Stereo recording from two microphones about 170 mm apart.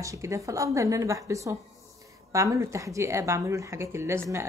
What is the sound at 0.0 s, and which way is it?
A woman's voice, 20° right (ahead or behind).